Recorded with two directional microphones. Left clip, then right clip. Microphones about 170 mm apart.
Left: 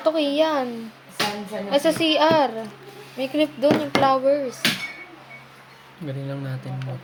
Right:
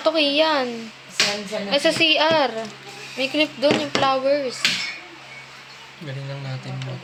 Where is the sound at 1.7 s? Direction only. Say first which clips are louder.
Right 2 dB; 10° left (ahead or behind).